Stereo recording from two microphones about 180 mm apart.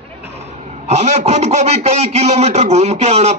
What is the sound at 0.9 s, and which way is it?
A man's voice, 35° right (ahead or behind).